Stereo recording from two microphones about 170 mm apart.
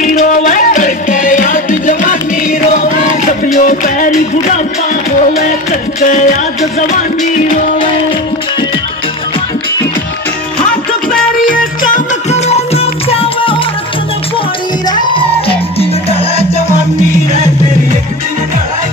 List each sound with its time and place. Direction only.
0.0 s music: 50° left (ahead or behind)
3.6 s music: 50° left (ahead or behind)
5.9 s music: 50° left (ahead or behind)
12.3 s music: 40° left (ahead or behind)
14.9 s music: 30° left (ahead or behind)